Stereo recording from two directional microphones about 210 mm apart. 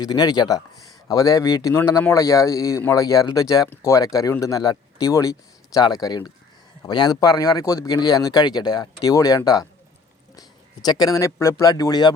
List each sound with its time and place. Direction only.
0.0 s speech: 20° left (ahead or behind)
10.8 s speech: 20° left (ahead or behind)